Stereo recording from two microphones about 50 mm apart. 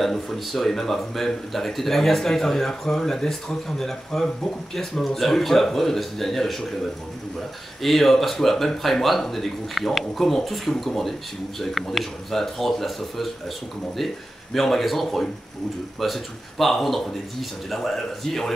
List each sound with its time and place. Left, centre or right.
0.0 s speech: centre
7.8 s speech: centre